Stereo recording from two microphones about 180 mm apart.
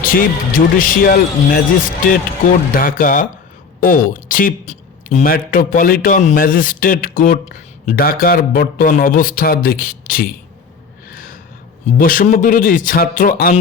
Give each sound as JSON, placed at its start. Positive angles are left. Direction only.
{"t": 0.0, "sound": "speech", "side_deg": 50}
{"t": 11.1, "sound": "a sound", "side_deg": 55}
{"t": 11.9, "sound": "speech", "side_deg": 50}